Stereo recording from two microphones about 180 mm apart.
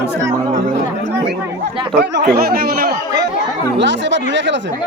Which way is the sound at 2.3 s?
55° right (ahead or behind).